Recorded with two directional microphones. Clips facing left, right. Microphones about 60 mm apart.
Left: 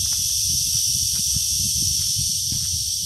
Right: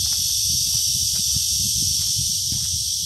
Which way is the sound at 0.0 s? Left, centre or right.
Centre.